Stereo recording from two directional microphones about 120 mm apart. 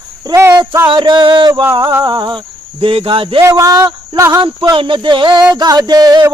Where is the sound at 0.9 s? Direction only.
40° right (ahead or behind).